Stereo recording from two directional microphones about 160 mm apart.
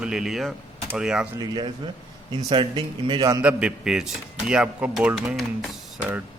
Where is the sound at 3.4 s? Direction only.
10° right (ahead or behind).